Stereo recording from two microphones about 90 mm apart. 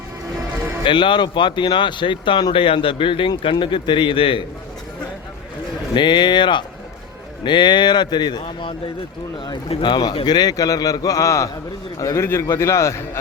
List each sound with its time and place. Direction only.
0.9 s speech: 60° left (ahead or behind); by 4.4 s 80° left
5.9 s a man's voice: 60° left (ahead or behind); by 13.0 s 35° left (ahead or behind)